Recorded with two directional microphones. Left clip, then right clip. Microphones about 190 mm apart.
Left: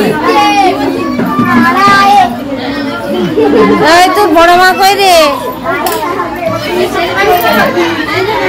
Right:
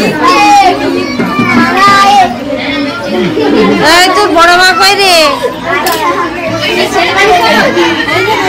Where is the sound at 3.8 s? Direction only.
10° left (ahead or behind).